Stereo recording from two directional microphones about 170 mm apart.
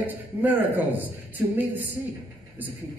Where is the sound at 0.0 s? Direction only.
10° right (ahead or behind).